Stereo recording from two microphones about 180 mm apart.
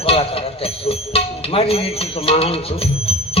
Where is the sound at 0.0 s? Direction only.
35° left (ahead or behind).